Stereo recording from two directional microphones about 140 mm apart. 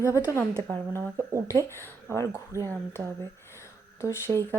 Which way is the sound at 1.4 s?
20° left (ahead or behind).